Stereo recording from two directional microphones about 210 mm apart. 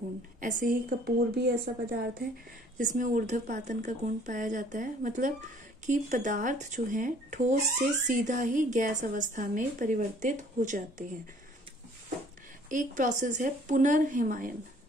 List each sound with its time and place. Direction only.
0.4 s a woman's voice: 40° right (ahead or behind)
12.6 s speech: 40° right (ahead or behind)